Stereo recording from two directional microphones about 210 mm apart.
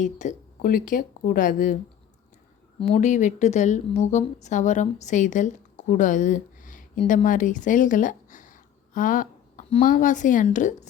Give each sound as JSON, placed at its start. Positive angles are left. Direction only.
{"t": 0.0, "sound": "a woman's voice", "side_deg": 35}